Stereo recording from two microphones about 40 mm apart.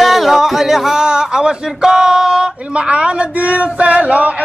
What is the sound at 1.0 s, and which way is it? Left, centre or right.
Speech, right.